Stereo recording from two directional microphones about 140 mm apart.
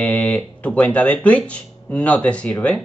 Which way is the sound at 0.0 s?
10° left (ahead or behind).